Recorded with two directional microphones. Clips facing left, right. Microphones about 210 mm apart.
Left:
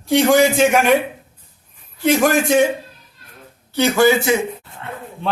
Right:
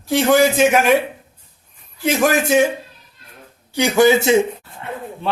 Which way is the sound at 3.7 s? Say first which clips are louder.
Right 1 dB; 15° right (ahead or behind).